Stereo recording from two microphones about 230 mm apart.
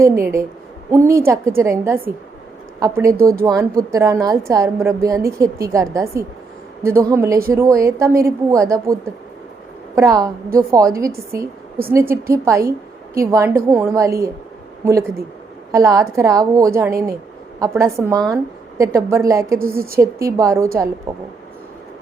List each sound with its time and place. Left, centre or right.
0.0 s a woman's voice: centre
3.2 s speech: right
3.4 s a woman's voice: centre
10.0 s a woman's voice: centre
15.7 s a woman's voice: centre